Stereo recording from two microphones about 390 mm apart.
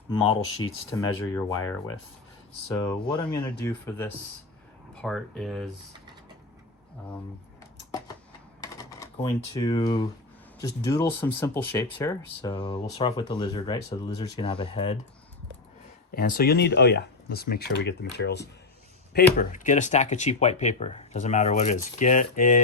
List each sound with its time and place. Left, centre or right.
0.6 s speech: centre
8.6 s speech: centre
16.1 s speech: left